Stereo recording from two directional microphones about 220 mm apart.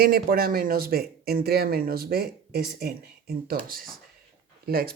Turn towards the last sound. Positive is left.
turn(degrees=-45)  # may be behind; listen again after turning